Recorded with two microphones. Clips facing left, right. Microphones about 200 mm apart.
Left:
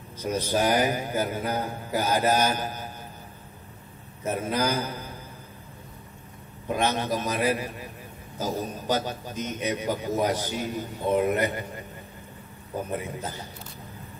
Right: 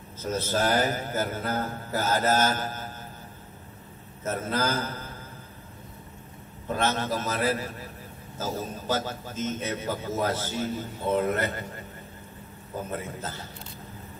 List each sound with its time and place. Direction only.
0.2 s a man's voice: 15° left (ahead or behind)
4.2 s a man's voice: 15° left (ahead or behind)
6.7 s a man's voice: 15° left (ahead or behind)